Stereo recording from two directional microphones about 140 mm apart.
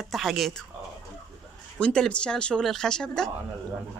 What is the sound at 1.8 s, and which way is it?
Speech, 5° left (ahead or behind).